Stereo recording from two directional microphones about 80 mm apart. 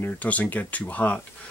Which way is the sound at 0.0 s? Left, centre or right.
Centre.